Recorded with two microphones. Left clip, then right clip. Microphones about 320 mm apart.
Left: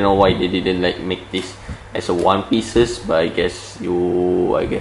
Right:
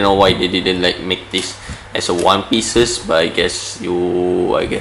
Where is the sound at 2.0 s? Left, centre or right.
Left.